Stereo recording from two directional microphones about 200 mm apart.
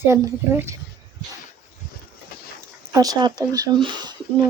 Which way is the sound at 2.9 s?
20° right (ahead or behind).